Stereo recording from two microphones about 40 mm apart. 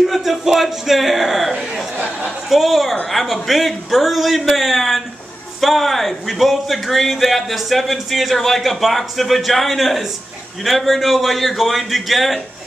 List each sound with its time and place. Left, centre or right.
0.0 s speech: centre
1.5 s speech: centre
2.0 s a sound: right
2.5 s speech: centre